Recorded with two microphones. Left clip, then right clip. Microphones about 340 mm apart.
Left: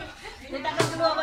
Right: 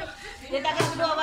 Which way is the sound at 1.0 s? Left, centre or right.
Centre.